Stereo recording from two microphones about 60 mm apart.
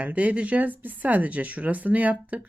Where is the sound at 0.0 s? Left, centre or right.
Right.